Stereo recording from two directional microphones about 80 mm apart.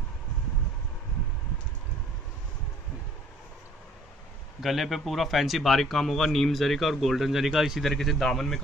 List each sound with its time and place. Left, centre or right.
4.6 s speech: centre